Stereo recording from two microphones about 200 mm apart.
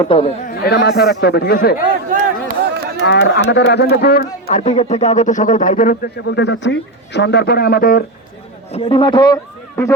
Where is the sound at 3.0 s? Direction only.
60° left (ahead or behind).